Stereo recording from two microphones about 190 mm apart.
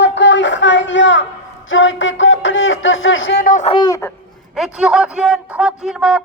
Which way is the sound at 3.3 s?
50° left (ahead or behind).